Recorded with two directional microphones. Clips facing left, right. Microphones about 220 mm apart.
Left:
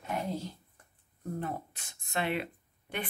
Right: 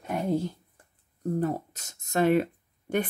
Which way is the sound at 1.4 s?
40° right (ahead or behind).